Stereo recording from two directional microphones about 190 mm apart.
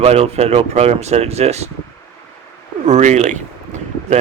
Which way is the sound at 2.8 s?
40° right (ahead or behind).